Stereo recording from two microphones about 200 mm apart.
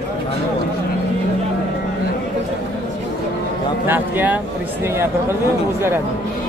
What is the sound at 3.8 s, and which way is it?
Speech, 10° right (ahead or behind).